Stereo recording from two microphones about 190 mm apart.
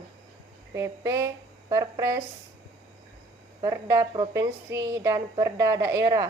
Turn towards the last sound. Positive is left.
turn(degrees=-15)  # may be behind; listen again after turning